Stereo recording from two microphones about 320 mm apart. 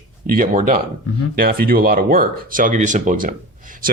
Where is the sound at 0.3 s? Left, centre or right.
Right.